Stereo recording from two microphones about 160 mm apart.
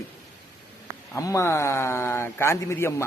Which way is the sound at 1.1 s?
20° left (ahead or behind).